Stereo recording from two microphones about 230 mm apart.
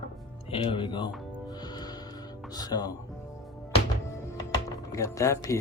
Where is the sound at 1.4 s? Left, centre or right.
Centre.